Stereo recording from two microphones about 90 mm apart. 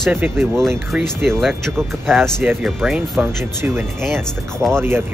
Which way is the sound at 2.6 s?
10° right (ahead or behind).